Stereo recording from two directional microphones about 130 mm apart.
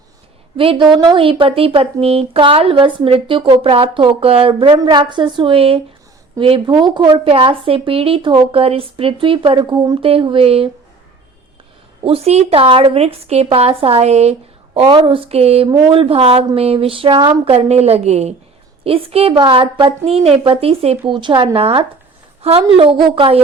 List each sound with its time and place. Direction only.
0.5 s speech: 45° right (ahead or behind)
12.0 s speech: 50° right (ahead or behind)
14.8 s a woman's voice: 40° right (ahead or behind); by 18.3 s 55° right (ahead or behind)
18.9 s speech: 45° right (ahead or behind)